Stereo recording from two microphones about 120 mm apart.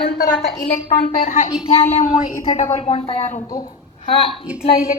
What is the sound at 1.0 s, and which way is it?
Speech, 90° left.